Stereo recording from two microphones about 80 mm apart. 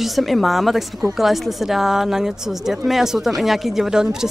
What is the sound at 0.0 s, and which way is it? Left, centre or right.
A woman's voice, centre.